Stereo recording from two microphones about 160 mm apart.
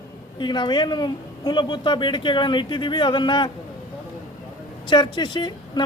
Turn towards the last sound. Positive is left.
turn(degrees=30)  # may be behind; listen again after turning